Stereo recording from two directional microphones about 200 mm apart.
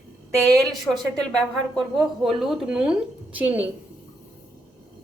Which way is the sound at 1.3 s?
Centre (ahead or behind).